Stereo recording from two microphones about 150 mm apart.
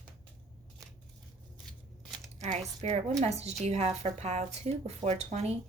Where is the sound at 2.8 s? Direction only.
50° right (ahead or behind).